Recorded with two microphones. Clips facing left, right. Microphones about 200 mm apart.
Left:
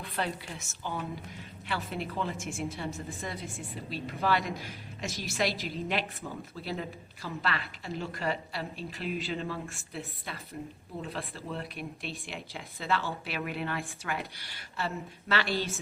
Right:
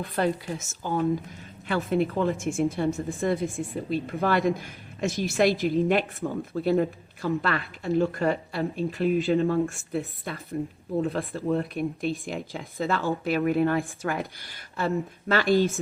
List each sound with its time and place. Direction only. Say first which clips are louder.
0.2 s a woman's voice: right 9 dB; 45° right (ahead or behind)